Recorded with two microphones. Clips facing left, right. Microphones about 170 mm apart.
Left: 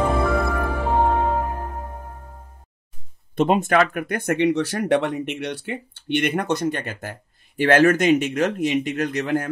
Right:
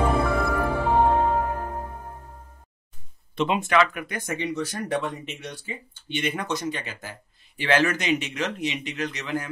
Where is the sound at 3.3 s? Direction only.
45° left (ahead or behind).